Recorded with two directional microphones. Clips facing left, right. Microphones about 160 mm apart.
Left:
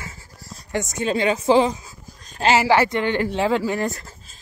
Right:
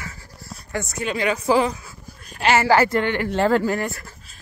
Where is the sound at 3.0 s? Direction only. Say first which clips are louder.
Left 2 dB; 20° left (ahead or behind).